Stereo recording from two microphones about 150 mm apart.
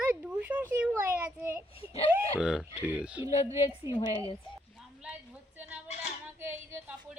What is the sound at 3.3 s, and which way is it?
A woman's voice, 45° left (ahead or behind).